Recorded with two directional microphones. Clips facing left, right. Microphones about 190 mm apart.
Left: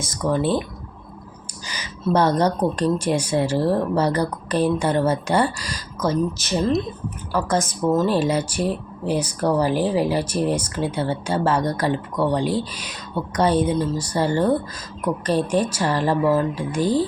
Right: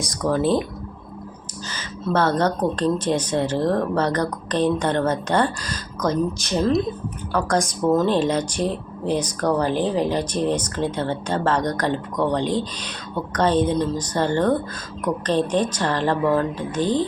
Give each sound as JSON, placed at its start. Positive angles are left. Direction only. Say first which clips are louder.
{"t": 0.0, "sound": "speech", "louder": "right 1 dB", "side_deg": 0}
{"t": 1.6, "sound": "speech", "louder": "left 2 dB", "side_deg": 15}